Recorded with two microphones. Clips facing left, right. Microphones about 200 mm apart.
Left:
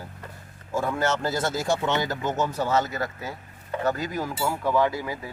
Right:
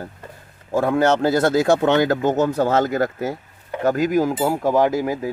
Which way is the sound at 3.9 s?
90° right.